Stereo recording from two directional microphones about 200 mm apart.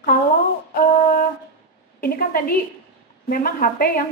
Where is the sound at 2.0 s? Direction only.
45° left (ahead or behind).